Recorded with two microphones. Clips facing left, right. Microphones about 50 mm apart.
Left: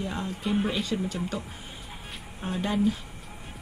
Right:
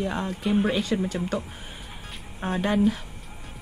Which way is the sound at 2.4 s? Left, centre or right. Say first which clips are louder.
Right 4 dB; right.